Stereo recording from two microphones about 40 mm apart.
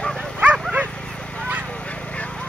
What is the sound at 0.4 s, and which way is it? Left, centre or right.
Dog, right.